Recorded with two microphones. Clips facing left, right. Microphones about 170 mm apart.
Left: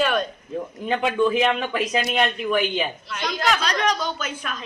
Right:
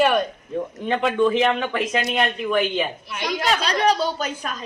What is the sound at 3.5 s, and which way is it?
A woman's voice, 30° right (ahead or behind).